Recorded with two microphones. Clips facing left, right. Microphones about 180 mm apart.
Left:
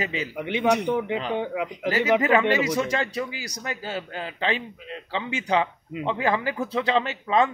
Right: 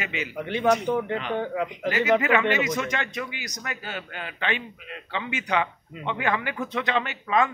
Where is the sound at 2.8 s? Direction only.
30° left (ahead or behind).